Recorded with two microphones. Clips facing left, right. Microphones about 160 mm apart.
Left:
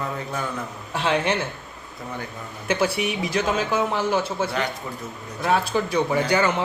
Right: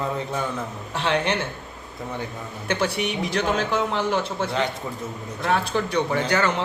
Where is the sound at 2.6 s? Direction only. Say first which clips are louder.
Left 2 dB; 5° left (ahead or behind).